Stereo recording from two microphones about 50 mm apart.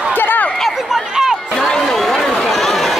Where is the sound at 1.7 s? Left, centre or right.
Centre.